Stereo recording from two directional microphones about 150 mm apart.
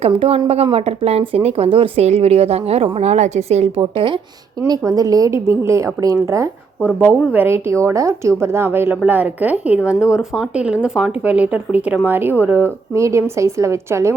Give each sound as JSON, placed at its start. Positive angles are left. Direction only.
{"t": 0.0, "sound": "speech", "side_deg": -40}
{"t": 3.9, "sound": "speech", "side_deg": -35}
{"t": 4.6, "sound": "a woman's voice", "side_deg": -25}